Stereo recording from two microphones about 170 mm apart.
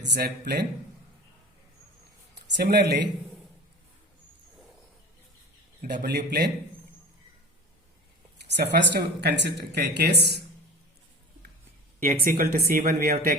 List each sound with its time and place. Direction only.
0.1 s speech: 75° right (ahead or behind)
2.6 s speech: 75° right (ahead or behind)
6.0 s speech: 70° right (ahead or behind)
8.5 s speech: 80° right
12.0 s speech: 60° right (ahead or behind)